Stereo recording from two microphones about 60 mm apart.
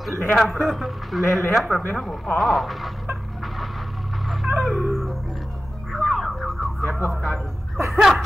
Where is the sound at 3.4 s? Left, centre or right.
Centre.